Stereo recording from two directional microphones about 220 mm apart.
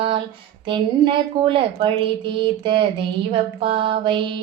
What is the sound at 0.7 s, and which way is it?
A woman's voice, 20° right (ahead or behind).